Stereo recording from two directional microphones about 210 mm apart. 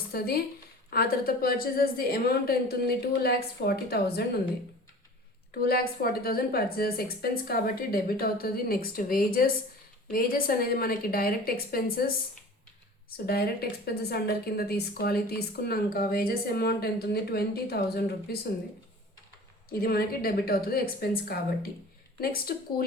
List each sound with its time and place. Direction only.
0.1 s speech: 45° left (ahead or behind)
5.6 s speech: 45° left (ahead or behind)
19.8 s speech: 45° left (ahead or behind)